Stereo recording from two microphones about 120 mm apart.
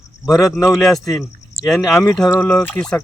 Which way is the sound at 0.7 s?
Centre (ahead or behind).